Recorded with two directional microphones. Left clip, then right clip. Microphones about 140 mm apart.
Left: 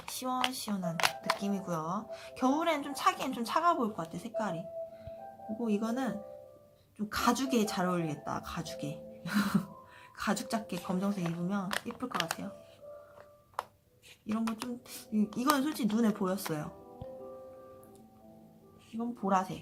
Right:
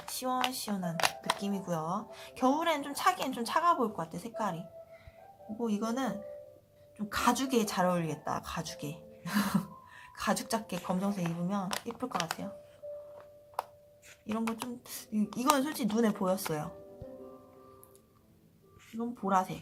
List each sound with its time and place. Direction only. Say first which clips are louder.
0.0 s a sound: right 1 dB; 5° right (ahead or behind)
1.0 s speech: even; 5° right (ahead or behind)
5.6 s speech: right 1 dB; 15° right (ahead or behind)
6.9 s speech: right 1 dB; 5° right (ahead or behind)
7.5 s speech: right 2 dB; 15° right (ahead or behind)
14.3 s speech: right 1 dB; 20° right (ahead or behind)
18.9 s speech: right 1 dB; centre (ahead or behind)